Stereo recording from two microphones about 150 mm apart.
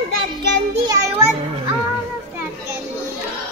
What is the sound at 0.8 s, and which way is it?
Music, 20° right (ahead or behind).